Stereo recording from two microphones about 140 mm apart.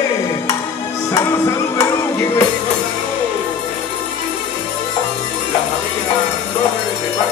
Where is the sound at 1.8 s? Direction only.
15° left (ahead or behind).